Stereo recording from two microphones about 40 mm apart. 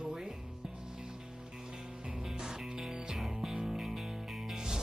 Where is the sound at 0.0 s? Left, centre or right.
Centre.